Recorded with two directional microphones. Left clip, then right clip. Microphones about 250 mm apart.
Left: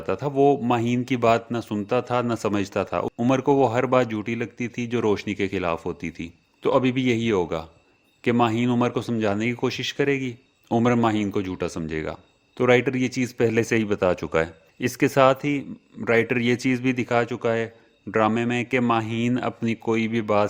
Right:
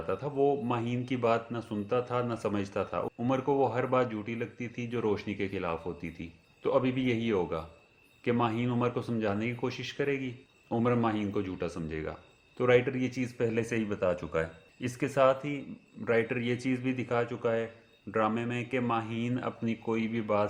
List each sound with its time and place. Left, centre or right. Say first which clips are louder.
0.1 s speech: left 9 dB; left